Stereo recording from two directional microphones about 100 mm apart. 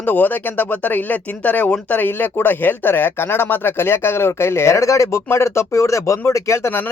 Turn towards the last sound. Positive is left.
turn(degrees=25)  # may be behind; listen again after turning